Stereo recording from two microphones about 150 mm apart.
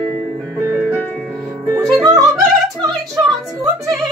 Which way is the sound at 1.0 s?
5° left (ahead or behind).